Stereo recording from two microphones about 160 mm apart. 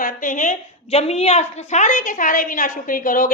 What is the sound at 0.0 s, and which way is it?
A woman's voice, 55° left (ahead or behind).